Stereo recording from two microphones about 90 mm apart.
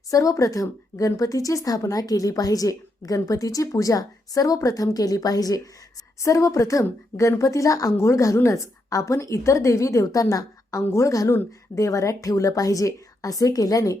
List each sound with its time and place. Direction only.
0.1 s speech: 40° left (ahead or behind)